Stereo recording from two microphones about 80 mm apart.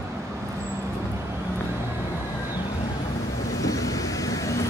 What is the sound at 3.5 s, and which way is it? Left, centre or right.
Vehicle, left.